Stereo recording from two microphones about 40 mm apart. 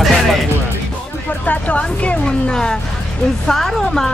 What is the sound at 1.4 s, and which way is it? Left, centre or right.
Music, left.